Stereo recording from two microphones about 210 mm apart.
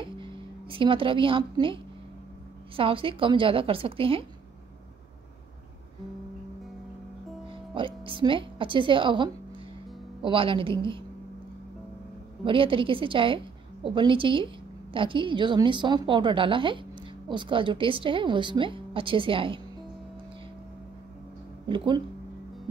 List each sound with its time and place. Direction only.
0.0 s music: 25° right (ahead or behind)
2.7 s a woman's voice: 25° right (ahead or behind)
7.7 s a woman's voice: 25° right (ahead or behind)
12.4 s a woman's voice: 25° right (ahead or behind)
21.6 s a woman's voice: 20° right (ahead or behind)